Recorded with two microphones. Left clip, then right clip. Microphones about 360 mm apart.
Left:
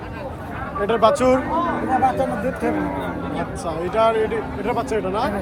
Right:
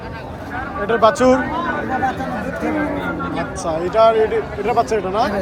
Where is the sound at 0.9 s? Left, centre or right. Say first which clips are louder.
Right 3 dB; centre.